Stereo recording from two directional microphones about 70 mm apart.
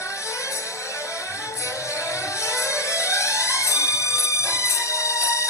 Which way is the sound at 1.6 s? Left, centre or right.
Left.